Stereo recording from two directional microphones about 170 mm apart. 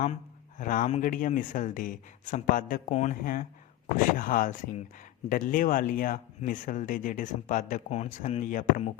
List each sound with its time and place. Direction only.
0.6 s speech: 50° left (ahead or behind)